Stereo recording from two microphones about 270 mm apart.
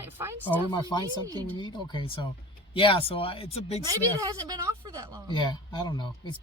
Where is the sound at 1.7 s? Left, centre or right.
Centre.